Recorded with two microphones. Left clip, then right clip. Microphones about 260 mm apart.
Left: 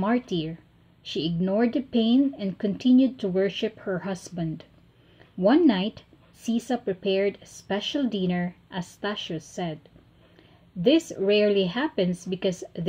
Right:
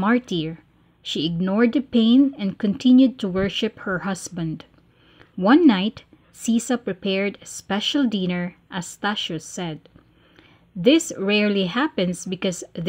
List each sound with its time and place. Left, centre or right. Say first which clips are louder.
0.0 s speech: right 4 dB; right
10.8 s speech: right 4 dB; right